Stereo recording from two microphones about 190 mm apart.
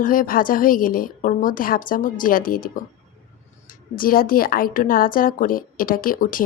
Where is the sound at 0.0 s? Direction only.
45° left (ahead or behind).